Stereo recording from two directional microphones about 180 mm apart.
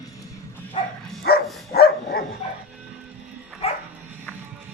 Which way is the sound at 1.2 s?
60° left (ahead or behind).